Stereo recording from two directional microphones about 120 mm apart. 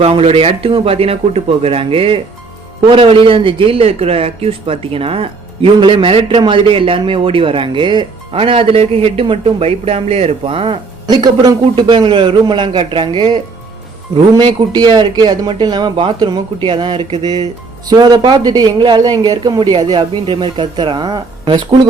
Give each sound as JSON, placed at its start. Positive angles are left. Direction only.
{"t": 0.0, "sound": "a man's voice", "side_deg": -55}